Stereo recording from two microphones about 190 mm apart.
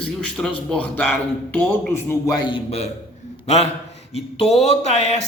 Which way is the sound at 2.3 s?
25° left (ahead or behind).